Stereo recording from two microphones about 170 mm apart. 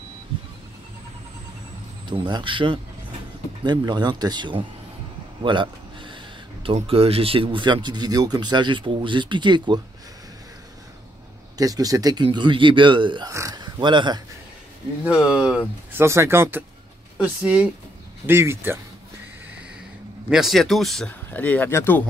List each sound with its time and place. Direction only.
2.0 s speech: 25° right (ahead or behind)
11.5 s speech: 20° right (ahead or behind)
15.0 s speech: 5° right (ahead or behind)
15.9 s speech: 15° right (ahead or behind)
20.2 s speech: centre (ahead or behind)